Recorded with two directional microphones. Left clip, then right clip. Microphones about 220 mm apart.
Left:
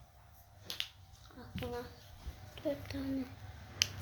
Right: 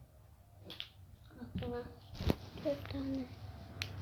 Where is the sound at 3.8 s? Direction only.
15° left (ahead or behind).